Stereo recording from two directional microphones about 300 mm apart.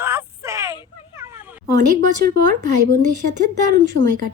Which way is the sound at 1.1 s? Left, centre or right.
Centre.